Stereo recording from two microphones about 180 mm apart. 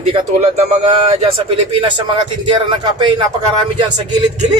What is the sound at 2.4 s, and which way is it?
Speech, 25° right (ahead or behind).